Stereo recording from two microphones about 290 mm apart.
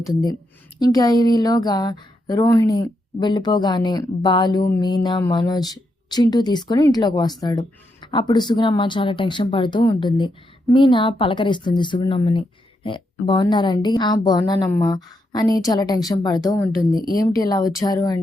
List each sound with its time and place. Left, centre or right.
0.8 s speech: centre